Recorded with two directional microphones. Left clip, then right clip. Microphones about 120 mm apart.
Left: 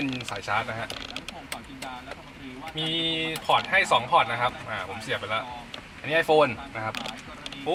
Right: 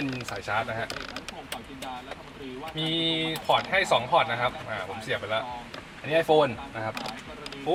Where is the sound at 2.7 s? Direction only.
5° left (ahead or behind).